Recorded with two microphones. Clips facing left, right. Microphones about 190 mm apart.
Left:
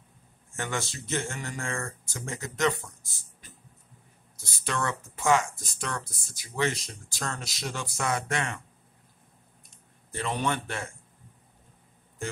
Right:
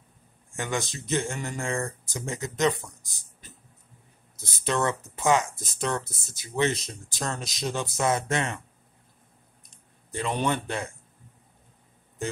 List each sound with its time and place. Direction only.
0.6 s speech: 15° right (ahead or behind)
10.4 s speech: 15° right (ahead or behind)